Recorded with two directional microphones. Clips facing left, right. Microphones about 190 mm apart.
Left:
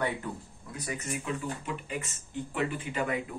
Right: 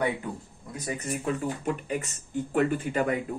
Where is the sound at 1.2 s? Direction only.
50° right (ahead or behind).